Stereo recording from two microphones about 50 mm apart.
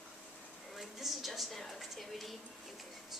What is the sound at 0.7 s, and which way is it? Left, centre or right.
A woman's voice, centre.